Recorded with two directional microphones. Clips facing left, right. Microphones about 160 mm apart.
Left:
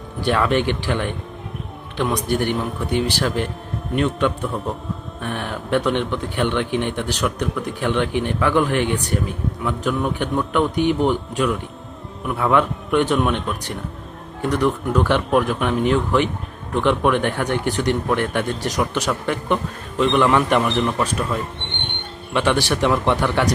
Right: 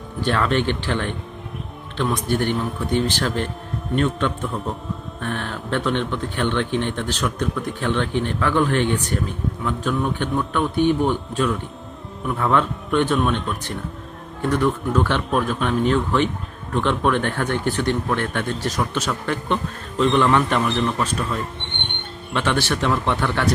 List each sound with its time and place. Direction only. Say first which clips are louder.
0.2 s speech: left 2 dB; 15° left (ahead or behind)
22.3 s speech: left 3 dB; 15° left (ahead or behind)